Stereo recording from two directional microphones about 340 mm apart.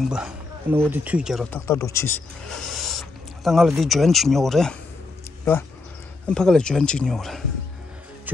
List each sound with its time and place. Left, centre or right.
0.0 s speech: centre